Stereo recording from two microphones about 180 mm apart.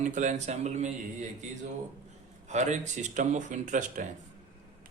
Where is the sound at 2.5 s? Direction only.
40° right (ahead or behind).